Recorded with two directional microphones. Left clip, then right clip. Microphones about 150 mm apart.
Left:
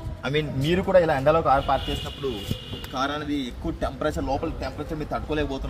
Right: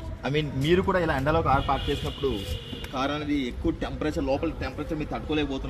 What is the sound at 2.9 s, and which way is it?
A man's voice, 30° left (ahead or behind).